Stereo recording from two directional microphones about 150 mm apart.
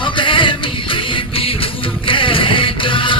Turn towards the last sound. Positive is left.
turn(degrees=35)  # may be behind; listen again after turning